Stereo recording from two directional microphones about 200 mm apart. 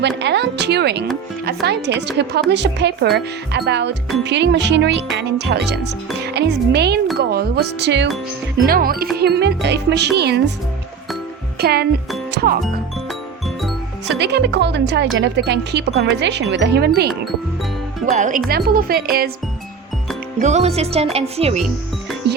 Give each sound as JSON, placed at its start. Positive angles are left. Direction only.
{"t": 0.2, "sound": "speech", "side_deg": -60}
{"t": 8.6, "sound": "speech", "side_deg": -45}
{"t": 11.6, "sound": "speech", "side_deg": -50}
{"t": 14.1, "sound": "speech", "side_deg": -55}
{"t": 18.0, "sound": "speech", "side_deg": -40}
{"t": 20.4, "sound": "speech", "side_deg": -35}
{"t": 22.3, "sound": "music", "side_deg": -55}